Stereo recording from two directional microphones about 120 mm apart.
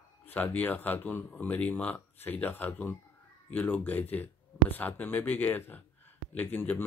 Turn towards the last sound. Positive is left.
turn(degrees=15)  # may be behind; listen again after turning